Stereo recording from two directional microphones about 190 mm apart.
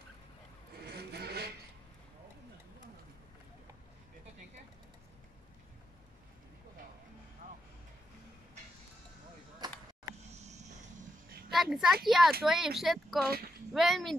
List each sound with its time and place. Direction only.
0.8 s vehicle: 55° right (ahead or behind)
7.4 s vehicle: 45° right (ahead or behind)
10.3 s a sound: 35° right (ahead or behind)
11.5 s a child's voice: centre (ahead or behind)